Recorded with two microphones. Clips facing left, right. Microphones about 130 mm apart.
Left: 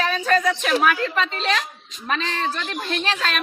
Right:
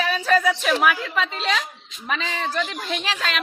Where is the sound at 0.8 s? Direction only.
10° right (ahead or behind).